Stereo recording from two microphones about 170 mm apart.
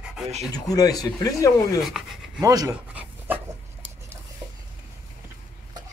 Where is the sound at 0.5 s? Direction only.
20° left (ahead or behind).